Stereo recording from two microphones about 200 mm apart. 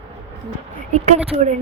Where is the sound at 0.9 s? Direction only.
30° right (ahead or behind).